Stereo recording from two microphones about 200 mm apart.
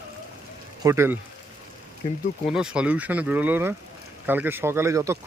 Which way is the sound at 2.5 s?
5° right (ahead or behind).